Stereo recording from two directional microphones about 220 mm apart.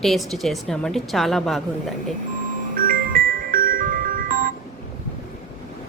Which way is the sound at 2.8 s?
40° right (ahead or behind).